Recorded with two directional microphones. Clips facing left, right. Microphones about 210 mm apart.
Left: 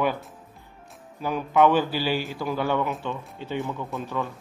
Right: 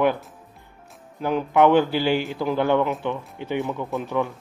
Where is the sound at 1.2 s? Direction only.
20° right (ahead or behind).